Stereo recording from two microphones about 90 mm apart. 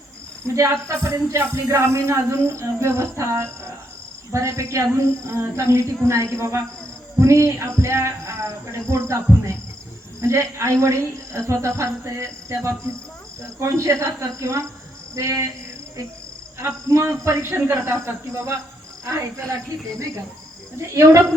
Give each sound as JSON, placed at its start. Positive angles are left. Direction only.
{"t": 0.4, "sound": "speech", "side_deg": -35}
{"t": 16.6, "sound": "a man's voice", "side_deg": -30}
{"t": 20.9, "sound": "speech", "side_deg": -35}